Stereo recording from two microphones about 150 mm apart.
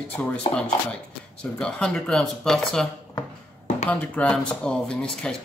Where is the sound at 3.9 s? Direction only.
10° left (ahead or behind).